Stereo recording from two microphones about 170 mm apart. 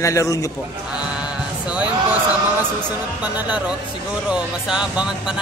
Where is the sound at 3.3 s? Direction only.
10° right (ahead or behind).